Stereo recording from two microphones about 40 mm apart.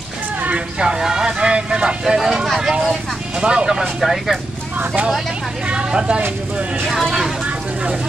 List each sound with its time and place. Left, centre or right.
0.7 s a sound: centre
1.5 s speech: right
2.1 s speech: centre
3.3 s speech: right
4.0 s speech: centre
5.7 s speech: right